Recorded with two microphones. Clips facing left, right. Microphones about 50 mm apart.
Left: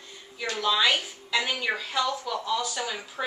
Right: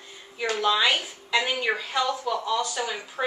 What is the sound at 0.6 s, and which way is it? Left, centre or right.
A woman's voice, centre.